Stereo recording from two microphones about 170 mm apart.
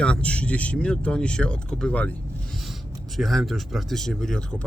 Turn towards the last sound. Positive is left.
turn(degrees=5)  # may be behind; listen again after turning